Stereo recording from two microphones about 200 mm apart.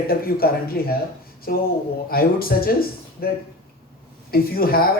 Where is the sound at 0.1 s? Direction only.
50° left (ahead or behind).